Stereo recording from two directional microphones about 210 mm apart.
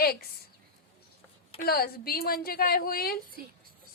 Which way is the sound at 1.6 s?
45° left (ahead or behind).